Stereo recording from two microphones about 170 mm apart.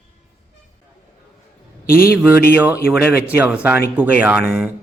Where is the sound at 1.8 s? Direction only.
60° left (ahead or behind).